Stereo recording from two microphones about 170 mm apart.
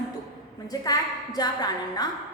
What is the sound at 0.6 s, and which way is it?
A woman's voice, 20° left (ahead or behind).